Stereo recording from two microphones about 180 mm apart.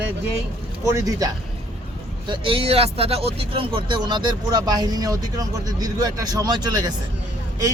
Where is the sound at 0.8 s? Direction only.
15° right (ahead or behind).